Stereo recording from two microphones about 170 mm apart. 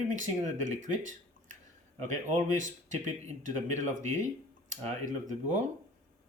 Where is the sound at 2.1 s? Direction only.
45° right (ahead or behind).